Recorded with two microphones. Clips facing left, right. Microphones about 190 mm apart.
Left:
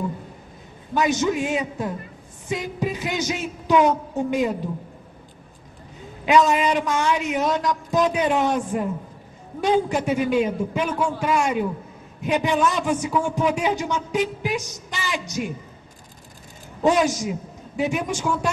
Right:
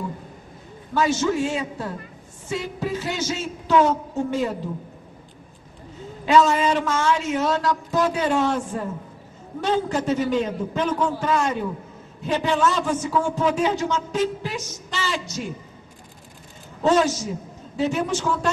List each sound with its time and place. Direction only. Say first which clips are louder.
0.9 s a man's voice: even; 15° left (ahead or behind)
6.2 s a man's voice: even; 15° left (ahead or behind)
16.8 s a man's voice: even; 15° left (ahead or behind)